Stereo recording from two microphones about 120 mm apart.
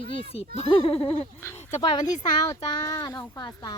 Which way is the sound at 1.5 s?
70° left (ahead or behind).